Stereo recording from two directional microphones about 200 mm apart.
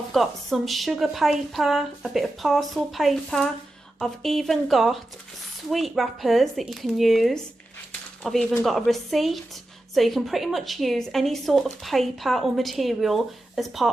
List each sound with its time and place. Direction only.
0.1 s a woman's voice: centre (ahead or behind)